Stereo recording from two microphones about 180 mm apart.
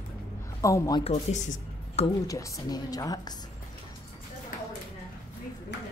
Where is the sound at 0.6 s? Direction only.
15° left (ahead or behind).